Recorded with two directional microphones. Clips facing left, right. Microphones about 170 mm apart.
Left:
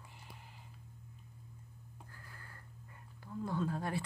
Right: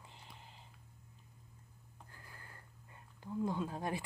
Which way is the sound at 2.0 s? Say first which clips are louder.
Right 1 dB; 20° right (ahead or behind).